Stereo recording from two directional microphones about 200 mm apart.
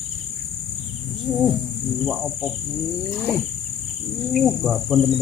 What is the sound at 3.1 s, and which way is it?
Wild animals, 10° left (ahead or behind).